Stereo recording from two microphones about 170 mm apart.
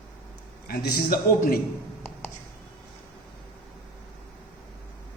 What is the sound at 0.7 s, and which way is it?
Speech, 65° left (ahead or behind).